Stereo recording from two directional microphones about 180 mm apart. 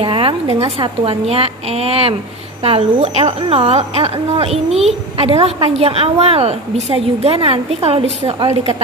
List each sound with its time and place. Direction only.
0.0 s a woman's voice: 30° right (ahead or behind)